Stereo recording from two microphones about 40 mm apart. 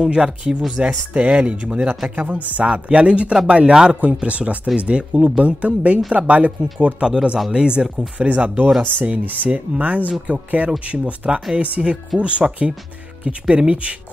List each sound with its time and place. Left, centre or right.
0.0 s speech: right
2.0 s speech: right
2.7 s speech: right
4.0 s speech: right
5.1 s speech: centre
5.4 s speech: right
7.0 s speech: right
8.2 s speech: right